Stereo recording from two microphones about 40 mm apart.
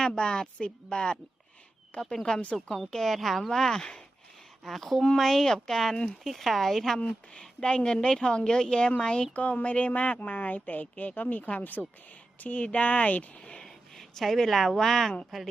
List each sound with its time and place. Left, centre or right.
0.0 s a woman's voice: centre
1.9 s a woman's voice: left
2.9 s speech: centre
4.6 s speech: centre
7.0 s a woman's voice: left
9.3 s a woman's voice: left
11.6 s speech: left
12.4 s a woman's voice: left
13.6 s a woman's voice: centre